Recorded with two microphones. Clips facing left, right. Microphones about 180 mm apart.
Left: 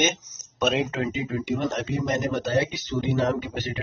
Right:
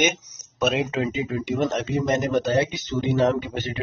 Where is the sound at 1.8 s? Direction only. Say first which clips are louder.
Right 3 dB; 25° right (ahead or behind).